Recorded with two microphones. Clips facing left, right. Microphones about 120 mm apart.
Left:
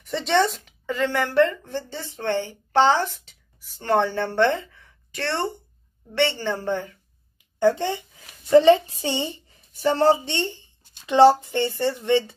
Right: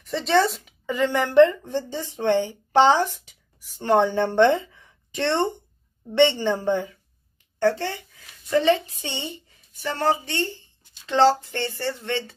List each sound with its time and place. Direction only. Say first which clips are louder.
0.0 s a woman's voice: right 1 dB; centre (ahead or behind)
7.3 s a sound: left 2 dB; 15° left (ahead or behind)
8.2 s a woman's voice: left 7 dB; 30° left (ahead or behind)